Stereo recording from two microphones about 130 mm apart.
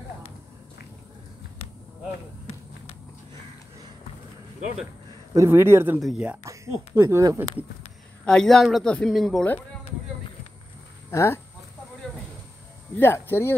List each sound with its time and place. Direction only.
5.3 s speech: 20° right (ahead or behind)
5.9 s speech: centre (ahead or behind)
6.4 s speech: 25° right (ahead or behind)
8.3 s speech: 5° left (ahead or behind)
11.1 s speech: 20° left (ahead or behind)
12.9 s speech: 15° left (ahead or behind)